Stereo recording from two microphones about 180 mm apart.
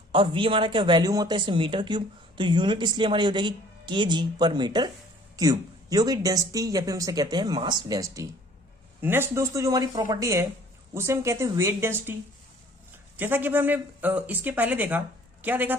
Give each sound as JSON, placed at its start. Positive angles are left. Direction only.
{"t": 0.1, "sound": "speech", "side_deg": -30}
{"t": 13.1, "sound": "speech", "side_deg": -10}